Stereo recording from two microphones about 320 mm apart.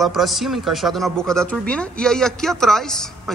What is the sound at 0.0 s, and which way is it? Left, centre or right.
Speech, centre.